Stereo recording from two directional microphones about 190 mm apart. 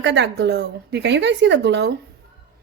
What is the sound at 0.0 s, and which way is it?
Speech, 70° right (ahead or behind).